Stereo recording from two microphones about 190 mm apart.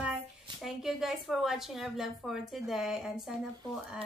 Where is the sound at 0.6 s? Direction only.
Centre (ahead or behind).